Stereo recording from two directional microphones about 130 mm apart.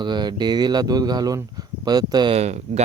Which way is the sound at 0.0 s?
35° right (ahead or behind).